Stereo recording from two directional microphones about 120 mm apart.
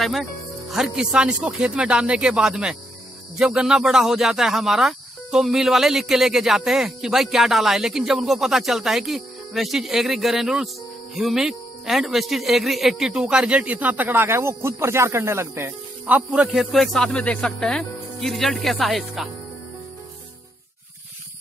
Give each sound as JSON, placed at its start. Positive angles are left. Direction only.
{"t": 0.0, "sound": "speech", "side_deg": 0}